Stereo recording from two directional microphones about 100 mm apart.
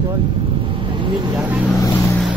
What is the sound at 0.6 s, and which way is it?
Vehicle, 60° right (ahead or behind).